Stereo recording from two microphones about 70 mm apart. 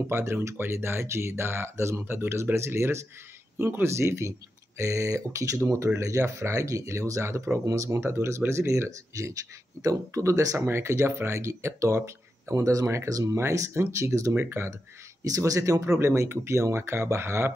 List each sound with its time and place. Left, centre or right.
0.0 s speech: right
7.6 s speech: right
8.0 s speech: right
14.3 s speech: right
15.2 s speech: right